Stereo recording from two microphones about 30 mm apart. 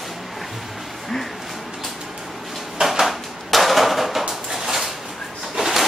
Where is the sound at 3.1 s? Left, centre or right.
Centre.